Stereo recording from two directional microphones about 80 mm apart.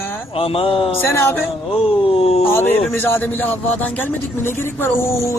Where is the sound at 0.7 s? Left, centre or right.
Left.